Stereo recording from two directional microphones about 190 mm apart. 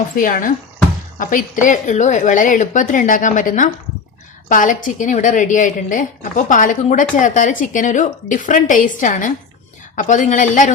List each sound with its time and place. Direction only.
0.2 s a woman's voice: 45° left (ahead or behind)